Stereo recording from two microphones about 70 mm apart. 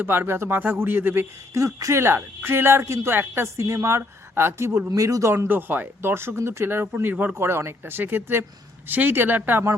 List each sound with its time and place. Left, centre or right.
0.0 s speech: right
1.5 s speech: right
4.9 s speech: right
5.3 s speech: right
7.3 s speech: right